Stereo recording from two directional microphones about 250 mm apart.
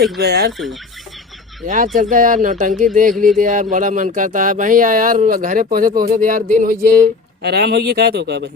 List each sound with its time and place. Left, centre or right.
0.2 s speech: right
0.5 s speech: centre
1.6 s speech: right